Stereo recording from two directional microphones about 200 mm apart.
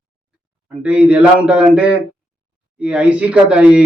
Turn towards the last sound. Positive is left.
turn(degrees=-5)  # may be behind; listen again after turning